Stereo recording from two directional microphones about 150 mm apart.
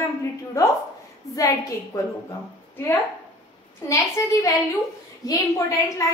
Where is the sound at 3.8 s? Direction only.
20° left (ahead or behind).